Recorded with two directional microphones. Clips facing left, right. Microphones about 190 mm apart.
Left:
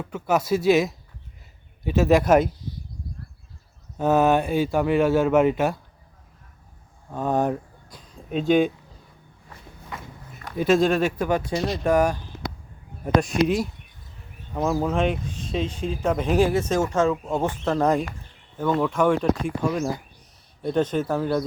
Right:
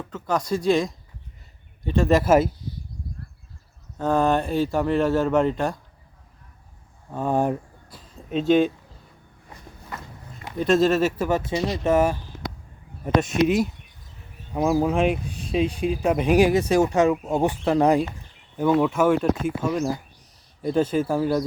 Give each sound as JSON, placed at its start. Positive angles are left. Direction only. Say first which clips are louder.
{"t": 0.0, "sound": "speech", "louder": "left 3 dB", "side_deg": 10}
{"t": 3.9, "sound": "speech", "louder": "left 2 dB", "side_deg": 5}
{"t": 7.1, "sound": "a sound", "louder": "even", "side_deg": -5}
{"t": 9.9, "sound": "walk", "louder": "even", "side_deg": 0}
{"t": 10.6, "sound": "speech", "louder": "even", "side_deg": 0}